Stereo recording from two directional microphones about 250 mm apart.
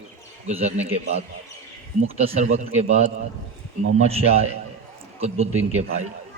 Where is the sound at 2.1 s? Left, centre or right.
Right.